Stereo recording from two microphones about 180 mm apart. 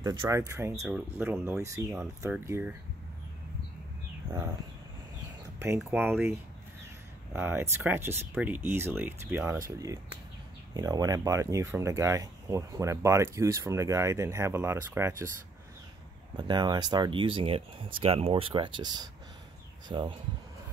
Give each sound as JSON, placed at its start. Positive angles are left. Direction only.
{"t": 0.0, "sound": "speech", "side_deg": -20}
{"t": 5.9, "sound": "speech", "side_deg": -10}
{"t": 7.3, "sound": "speech", "side_deg": -10}
{"t": 16.3, "sound": "speech", "side_deg": -25}